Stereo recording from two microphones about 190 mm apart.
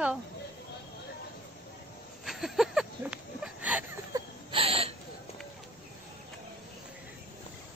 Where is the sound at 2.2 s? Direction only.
Centre (ahead or behind).